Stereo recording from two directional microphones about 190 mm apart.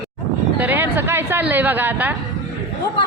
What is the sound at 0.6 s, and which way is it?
Speech, 10° right (ahead or behind).